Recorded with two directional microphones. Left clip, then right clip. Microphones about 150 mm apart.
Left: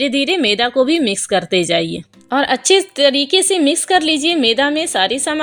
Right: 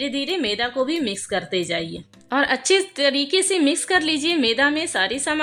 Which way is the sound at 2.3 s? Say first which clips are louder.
Left 5 dB; 25° left (ahead or behind).